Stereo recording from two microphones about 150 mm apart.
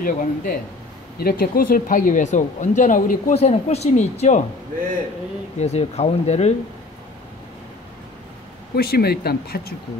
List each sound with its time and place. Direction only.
0.0 s speech: 70° left (ahead or behind)
1.1 s speech: 85° left; by 4.4 s 50° left (ahead or behind)
5.6 s speech: 45° left (ahead or behind)
8.7 s speech: 90° left